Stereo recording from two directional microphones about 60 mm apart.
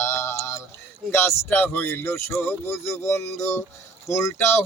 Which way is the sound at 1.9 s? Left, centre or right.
Left.